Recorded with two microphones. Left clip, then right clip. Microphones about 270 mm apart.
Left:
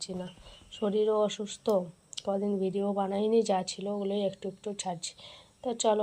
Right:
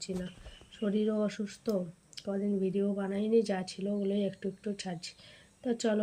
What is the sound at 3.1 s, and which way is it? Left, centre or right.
Speech, centre.